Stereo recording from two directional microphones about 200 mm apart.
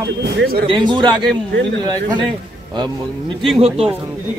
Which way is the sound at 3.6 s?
30° right (ahead or behind).